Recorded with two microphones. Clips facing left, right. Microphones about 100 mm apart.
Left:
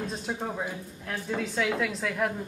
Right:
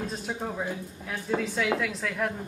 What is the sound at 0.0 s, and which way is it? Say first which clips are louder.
A woman's voice: even; centre (ahead or behind).